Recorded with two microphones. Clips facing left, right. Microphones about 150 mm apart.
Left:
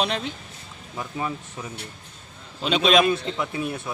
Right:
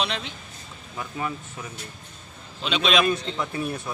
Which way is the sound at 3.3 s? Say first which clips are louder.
Left 1 dB; 10° left (ahead or behind).